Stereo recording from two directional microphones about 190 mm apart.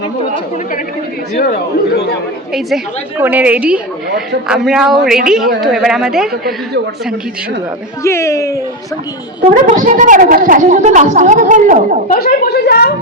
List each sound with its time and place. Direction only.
2.5 s a woman's voice: centre (ahead or behind)
8.0 s speech: 15° left (ahead or behind)
9.5 s a woman's voice: 40° right (ahead or behind)
12.0 s a woman's voice: 50° left (ahead or behind)